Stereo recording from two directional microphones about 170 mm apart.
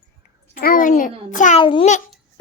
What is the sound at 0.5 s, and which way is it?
A child's voice, 55° left (ahead or behind).